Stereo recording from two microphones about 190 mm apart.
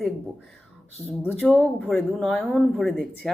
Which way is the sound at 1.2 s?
5° left (ahead or behind).